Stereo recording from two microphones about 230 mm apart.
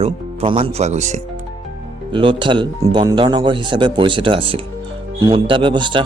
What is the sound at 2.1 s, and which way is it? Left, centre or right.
Speech, right.